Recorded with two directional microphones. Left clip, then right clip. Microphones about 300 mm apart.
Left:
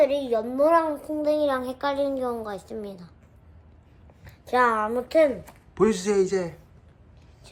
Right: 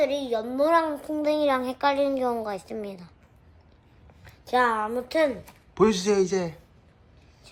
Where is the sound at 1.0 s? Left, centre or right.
Centre.